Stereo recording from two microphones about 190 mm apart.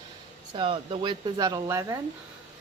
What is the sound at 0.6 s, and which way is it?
Speech, 25° right (ahead or behind).